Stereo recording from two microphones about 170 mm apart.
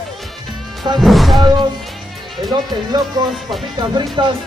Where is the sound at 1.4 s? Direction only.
25° right (ahead or behind).